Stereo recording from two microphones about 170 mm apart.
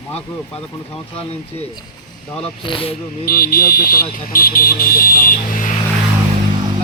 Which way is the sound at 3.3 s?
60° left (ahead or behind).